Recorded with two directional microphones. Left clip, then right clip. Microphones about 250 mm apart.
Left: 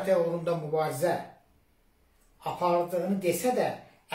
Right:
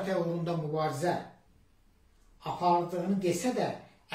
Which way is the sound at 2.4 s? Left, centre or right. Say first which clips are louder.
Left 1 dB; centre.